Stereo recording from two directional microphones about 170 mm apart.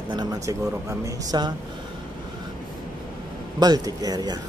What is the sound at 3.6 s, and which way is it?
Speech, 20° right (ahead or behind).